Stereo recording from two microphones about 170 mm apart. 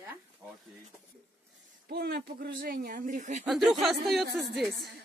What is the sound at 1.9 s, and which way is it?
Speech, 70° right (ahead or behind).